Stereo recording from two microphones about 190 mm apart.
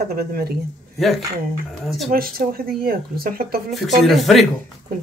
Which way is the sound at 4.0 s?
Centre (ahead or behind).